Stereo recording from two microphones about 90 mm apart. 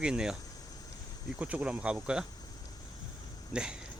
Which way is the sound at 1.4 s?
15° right (ahead or behind).